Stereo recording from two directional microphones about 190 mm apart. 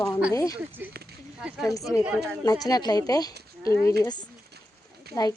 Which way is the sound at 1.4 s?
5° right (ahead or behind).